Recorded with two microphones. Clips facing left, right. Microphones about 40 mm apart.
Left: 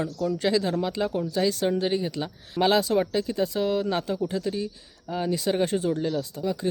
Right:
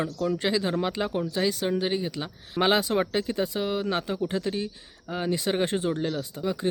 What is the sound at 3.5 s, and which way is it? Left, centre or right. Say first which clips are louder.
Speech: left 2 dB; centre.